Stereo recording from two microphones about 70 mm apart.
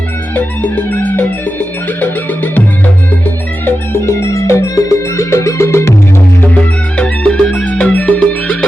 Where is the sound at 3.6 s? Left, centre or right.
Left.